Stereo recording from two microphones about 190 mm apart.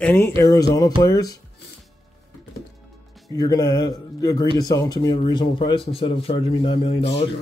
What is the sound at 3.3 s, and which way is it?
A man's voice, 20° left (ahead or behind).